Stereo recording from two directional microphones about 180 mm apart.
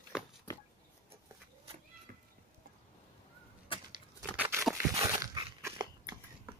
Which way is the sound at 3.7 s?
30° left (ahead or behind).